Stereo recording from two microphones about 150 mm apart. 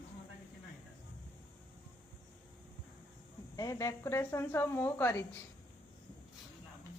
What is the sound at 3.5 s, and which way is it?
A woman's voice, 20° left (ahead or behind).